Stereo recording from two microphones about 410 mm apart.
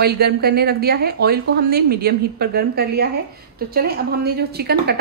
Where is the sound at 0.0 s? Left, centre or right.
Right.